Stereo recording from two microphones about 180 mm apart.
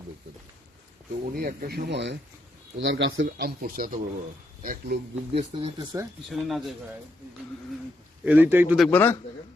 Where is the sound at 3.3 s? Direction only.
55° right (ahead or behind).